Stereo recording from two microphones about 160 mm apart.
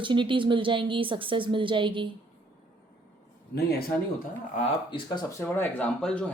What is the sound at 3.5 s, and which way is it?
Speech, 75° left (ahead or behind).